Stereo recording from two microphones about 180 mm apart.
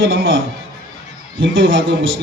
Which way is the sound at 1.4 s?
90° right.